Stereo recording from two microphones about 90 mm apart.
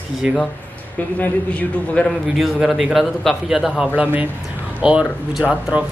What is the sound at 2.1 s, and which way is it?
Speech, centre (ahead or behind).